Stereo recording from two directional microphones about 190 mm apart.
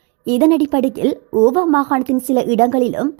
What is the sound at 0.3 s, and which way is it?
A woman's voice, 30° right (ahead or behind).